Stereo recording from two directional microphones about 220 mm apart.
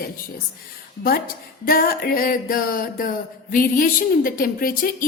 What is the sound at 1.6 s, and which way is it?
A woman's voice, 40° left (ahead or behind).